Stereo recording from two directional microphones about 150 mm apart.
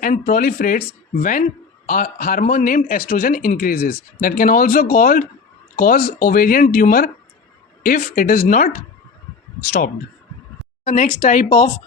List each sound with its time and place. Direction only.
0.0 s speech: 65° left (ahead or behind)
9.6 s speech: 90° left
10.8 s speech: 60° left (ahead or behind)